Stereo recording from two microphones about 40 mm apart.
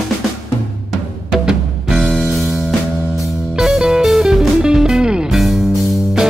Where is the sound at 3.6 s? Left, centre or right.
Centre.